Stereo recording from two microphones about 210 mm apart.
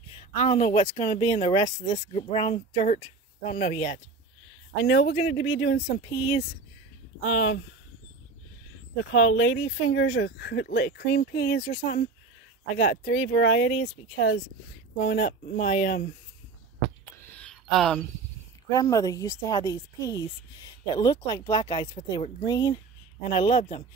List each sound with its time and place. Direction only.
0.4 s a woman's voice: 35° left (ahead or behind)
4.8 s speech: 55° left (ahead or behind)
5.9 s a woman's voice: 25° left (ahead or behind)
7.2 s speech: 65° left (ahead or behind)
9.1 s speech: 65° left (ahead or behind)
11.6 s speech: 30° left (ahead or behind)
12.7 s speech: 45° left (ahead or behind)
13.1 s speech: 65° left (ahead or behind); by 16.0 s 40° left (ahead or behind)
17.4 s a sound: centre (ahead or behind)
18.7 s a woman's voice: 15° left (ahead or behind)